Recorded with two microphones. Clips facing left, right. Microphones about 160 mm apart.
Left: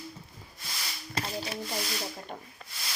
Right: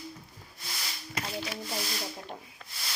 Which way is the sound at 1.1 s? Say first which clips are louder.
Left 1 dB; 30° left (ahead or behind).